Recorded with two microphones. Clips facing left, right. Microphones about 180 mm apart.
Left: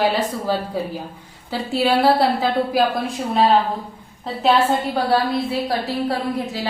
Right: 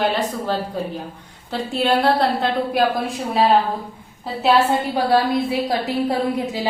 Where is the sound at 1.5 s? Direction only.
5° left (ahead or behind).